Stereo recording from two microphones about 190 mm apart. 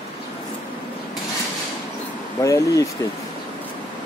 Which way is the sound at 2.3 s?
15° left (ahead or behind).